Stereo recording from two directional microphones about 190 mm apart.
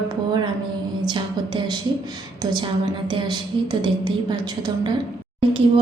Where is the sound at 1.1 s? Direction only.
25° right (ahead or behind).